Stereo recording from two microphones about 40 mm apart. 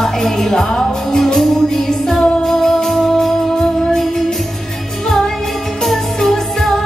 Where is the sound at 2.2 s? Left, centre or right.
Left; by 4.2 s centre.